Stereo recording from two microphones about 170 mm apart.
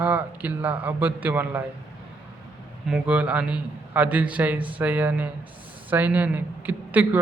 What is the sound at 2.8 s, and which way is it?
A man's voice, 5° right (ahead or behind).